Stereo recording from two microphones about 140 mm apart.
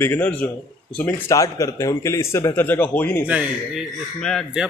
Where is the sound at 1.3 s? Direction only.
25° left (ahead or behind).